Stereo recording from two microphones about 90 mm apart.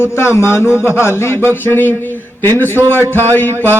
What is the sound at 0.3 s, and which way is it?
A man's voice, 30° left (ahead or behind).